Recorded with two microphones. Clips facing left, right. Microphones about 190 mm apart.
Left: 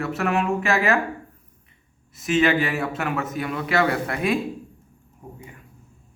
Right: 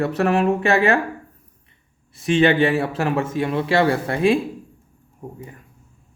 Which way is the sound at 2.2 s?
30° right (ahead or behind).